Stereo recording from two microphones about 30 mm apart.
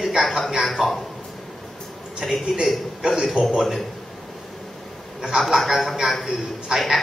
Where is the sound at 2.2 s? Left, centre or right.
Centre.